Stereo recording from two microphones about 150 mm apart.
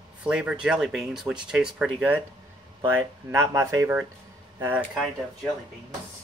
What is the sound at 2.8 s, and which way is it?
Speech, 15° right (ahead or behind).